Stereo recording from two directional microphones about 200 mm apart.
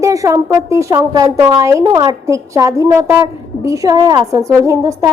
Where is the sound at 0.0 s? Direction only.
15° right (ahead or behind).